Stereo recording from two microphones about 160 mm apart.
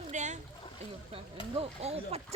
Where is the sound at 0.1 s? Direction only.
50° right (ahead or behind).